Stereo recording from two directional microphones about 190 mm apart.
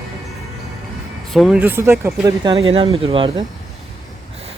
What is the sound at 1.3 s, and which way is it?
Speech, centre (ahead or behind).